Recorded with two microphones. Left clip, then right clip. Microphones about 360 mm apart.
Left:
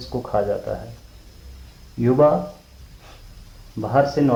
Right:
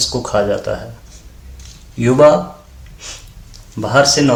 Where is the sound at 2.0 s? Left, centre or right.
Left.